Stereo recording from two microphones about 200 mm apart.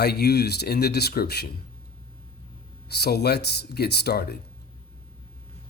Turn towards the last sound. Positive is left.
turn(degrees=50)  # may be behind; listen again after turning